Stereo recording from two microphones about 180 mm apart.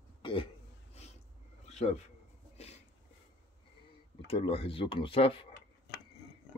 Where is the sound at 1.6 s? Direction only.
40° left (ahead or behind).